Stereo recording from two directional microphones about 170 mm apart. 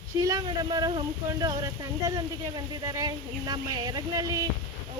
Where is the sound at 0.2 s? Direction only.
20° right (ahead or behind).